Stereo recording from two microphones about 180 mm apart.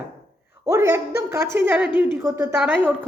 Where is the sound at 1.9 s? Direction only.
25° left (ahead or behind).